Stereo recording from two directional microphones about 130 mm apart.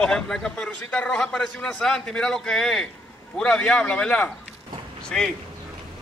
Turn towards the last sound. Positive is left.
turn(degrees=5)  # may be behind; listen again after turning